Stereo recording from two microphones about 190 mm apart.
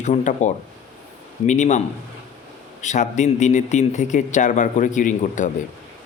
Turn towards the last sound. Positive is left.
turn(degrees=40)  # may be behind; listen again after turning